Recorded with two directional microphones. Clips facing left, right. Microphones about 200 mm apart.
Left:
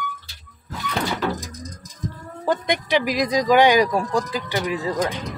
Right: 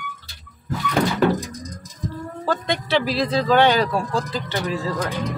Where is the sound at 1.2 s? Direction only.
55° right (ahead or behind).